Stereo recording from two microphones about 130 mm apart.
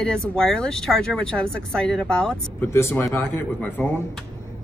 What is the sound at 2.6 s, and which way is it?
A man's voice, 20° left (ahead or behind).